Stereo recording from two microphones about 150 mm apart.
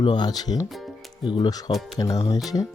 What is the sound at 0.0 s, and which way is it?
Speech, 30° left (ahead or behind).